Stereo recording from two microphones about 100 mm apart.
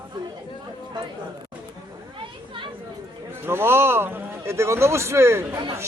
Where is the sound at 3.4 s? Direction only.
25° right (ahead or behind).